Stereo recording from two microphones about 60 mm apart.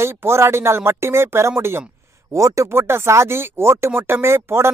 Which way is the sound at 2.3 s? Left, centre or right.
Right.